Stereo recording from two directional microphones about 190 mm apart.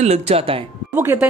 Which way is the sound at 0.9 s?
10° right (ahead or behind).